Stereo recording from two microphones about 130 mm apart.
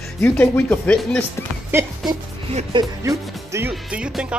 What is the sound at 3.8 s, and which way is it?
Speech, 10° right (ahead or behind).